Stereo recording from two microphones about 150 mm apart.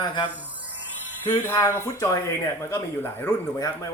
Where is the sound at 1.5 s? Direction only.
20° left (ahead or behind).